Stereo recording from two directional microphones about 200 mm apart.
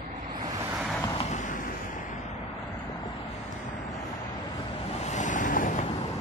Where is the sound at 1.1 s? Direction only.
35° left (ahead or behind).